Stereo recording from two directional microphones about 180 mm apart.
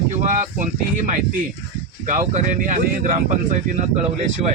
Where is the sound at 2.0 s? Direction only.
45° right (ahead or behind).